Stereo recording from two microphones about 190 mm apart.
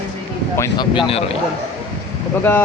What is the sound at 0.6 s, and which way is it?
Speech, 25° left (ahead or behind).